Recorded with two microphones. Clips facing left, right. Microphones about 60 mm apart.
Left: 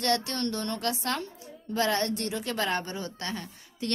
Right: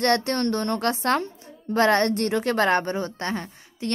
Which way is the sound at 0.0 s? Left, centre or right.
Right.